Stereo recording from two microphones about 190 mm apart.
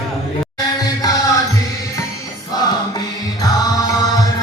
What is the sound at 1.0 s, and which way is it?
Music, 20° left (ahead or behind).